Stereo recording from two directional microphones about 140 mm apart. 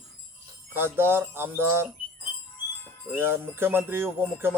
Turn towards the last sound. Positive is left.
turn(degrees=-15)  # may be behind; listen again after turning